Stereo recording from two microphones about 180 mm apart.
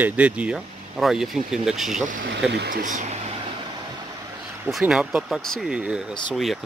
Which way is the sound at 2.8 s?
45° right (ahead or behind).